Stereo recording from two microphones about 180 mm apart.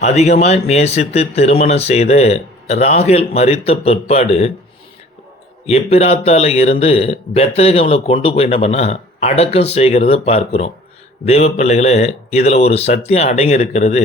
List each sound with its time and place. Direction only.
0.0 s speech: 35° left (ahead or behind)
5.6 s speech: 35° left (ahead or behind)